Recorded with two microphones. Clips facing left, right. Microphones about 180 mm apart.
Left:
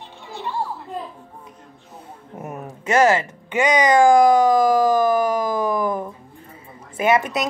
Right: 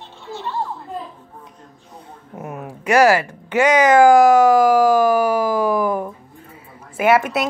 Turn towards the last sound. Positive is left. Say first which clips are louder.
# right 3 dB
turn(degrees=-10)  # may be behind; listen again after turning